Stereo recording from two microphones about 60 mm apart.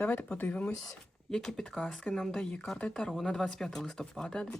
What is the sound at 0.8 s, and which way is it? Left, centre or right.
Speech, centre.